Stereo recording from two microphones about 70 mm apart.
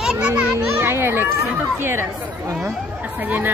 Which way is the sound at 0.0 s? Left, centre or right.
Centre.